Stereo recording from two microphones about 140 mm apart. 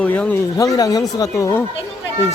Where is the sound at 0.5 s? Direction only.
25° left (ahead or behind).